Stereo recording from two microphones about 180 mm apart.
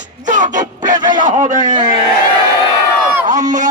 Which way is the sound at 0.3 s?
45° right (ahead or behind).